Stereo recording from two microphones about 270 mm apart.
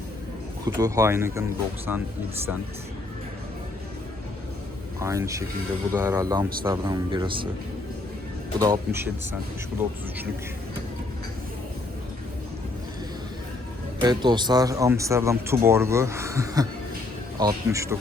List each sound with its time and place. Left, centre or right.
0.6 s speech: centre
4.9 s speech: centre
8.5 s speech: centre
14.0 s speech: centre